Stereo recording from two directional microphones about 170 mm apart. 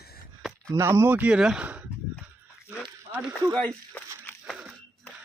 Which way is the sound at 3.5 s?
10° left (ahead or behind).